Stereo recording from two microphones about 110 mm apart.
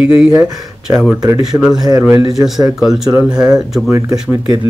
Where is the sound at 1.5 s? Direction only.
15° right (ahead or behind).